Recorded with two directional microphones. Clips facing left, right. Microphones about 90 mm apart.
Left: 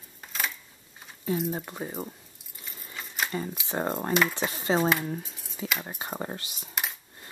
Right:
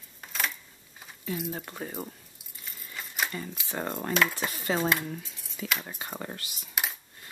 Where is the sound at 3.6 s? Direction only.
25° left (ahead or behind).